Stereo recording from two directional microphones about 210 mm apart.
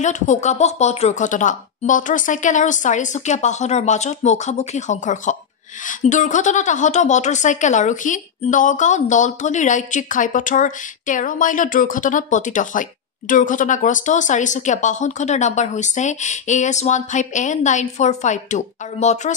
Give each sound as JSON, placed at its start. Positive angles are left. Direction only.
{"t": 0.0, "sound": "a woman's voice", "side_deg": 35}